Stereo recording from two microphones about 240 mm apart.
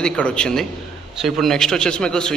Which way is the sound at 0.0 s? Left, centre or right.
Centre.